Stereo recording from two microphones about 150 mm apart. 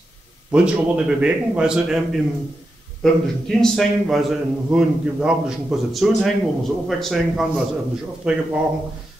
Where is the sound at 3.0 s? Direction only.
5° left (ahead or behind).